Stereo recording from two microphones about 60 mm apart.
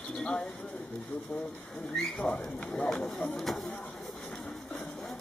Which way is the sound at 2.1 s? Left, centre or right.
Centre.